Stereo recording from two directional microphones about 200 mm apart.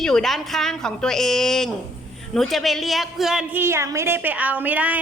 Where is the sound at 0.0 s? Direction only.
Centre (ahead or behind).